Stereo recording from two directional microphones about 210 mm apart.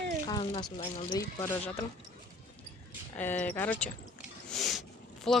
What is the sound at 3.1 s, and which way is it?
Speech, 10° left (ahead or behind).